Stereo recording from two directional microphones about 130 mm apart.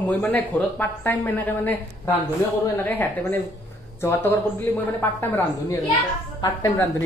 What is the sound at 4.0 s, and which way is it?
Speech, 20° left (ahead or behind).